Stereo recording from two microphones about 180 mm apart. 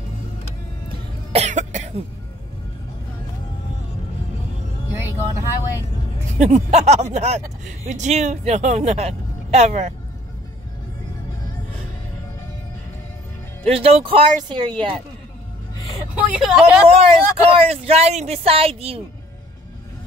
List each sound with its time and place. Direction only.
1.3 s cough: 40° right (ahead or behind)
6.3 s speech: 40° right (ahead or behind)
13.7 s speech: 35° right (ahead or behind)
16.2 s speech: 5° right (ahead or behind)
16.9 s speech: 35° right (ahead or behind)